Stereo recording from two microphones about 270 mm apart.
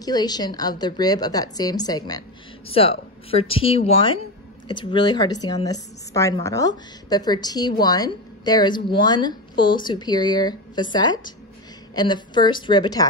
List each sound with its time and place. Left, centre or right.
0.0 s a woman's voice: centre